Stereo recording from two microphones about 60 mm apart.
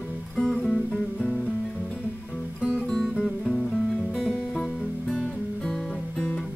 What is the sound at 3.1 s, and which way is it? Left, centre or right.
Music, centre.